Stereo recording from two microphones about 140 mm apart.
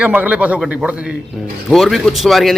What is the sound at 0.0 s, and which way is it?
A man's voice, 10° right (ahead or behind).